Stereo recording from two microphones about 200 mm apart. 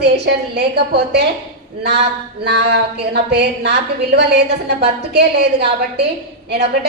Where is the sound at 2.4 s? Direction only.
55° right (ahead or behind).